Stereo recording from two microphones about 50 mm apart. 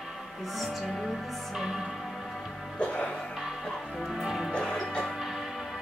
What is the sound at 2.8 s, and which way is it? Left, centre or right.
Music, left.